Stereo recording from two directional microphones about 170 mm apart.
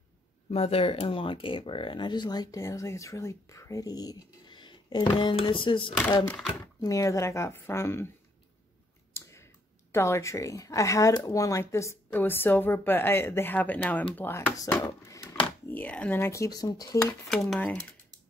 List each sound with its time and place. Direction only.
0.5 s speech: 35° left (ahead or behind)
6.8 s a woman's voice: 20° left (ahead or behind)
9.1 s clicking: 15° left (ahead or behind)
9.9 s a woman's voice: 15° left (ahead or behind)
14.9 s a sound: 20° left (ahead or behind)
15.7 s a woman's voice: 10° left (ahead or behind)
17.3 s speech: 5° left (ahead or behind)